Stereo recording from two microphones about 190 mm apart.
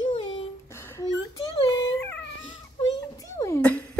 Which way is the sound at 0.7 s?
15° left (ahead or behind).